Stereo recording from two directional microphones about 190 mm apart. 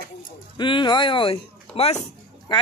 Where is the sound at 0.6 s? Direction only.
25° left (ahead or behind).